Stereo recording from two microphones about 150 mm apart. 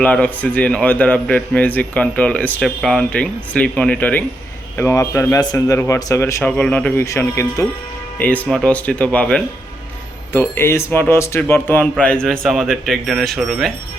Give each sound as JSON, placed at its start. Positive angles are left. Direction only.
{"t": 0.0, "sound": "a man's voice", "side_deg": 10}
{"t": 6.6, "sound": "a man's voice", "side_deg": 10}